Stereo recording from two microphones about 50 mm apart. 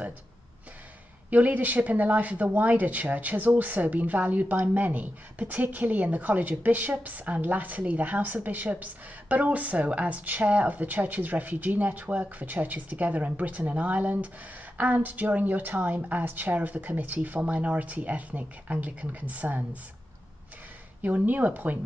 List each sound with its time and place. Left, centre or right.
1.3 s speech: right
21.0 s speech: right